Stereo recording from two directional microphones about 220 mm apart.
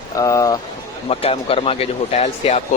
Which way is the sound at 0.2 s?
15° left (ahead or behind).